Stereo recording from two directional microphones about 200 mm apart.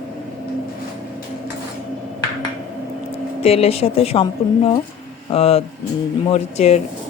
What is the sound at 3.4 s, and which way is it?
Speech, 30° left (ahead or behind).